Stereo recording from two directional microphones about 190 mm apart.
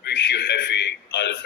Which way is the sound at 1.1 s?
65° left (ahead or behind).